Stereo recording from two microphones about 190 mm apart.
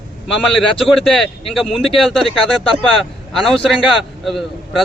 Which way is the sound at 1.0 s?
Centre (ahead or behind).